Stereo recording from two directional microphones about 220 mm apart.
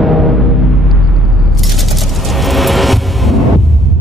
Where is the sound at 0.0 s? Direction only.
Centre (ahead or behind).